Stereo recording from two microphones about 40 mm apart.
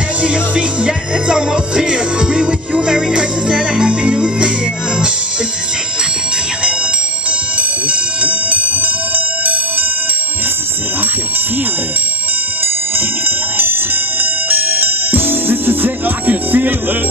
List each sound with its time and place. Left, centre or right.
0.2 s music: right
7.5 s music: right
14.5 s music: right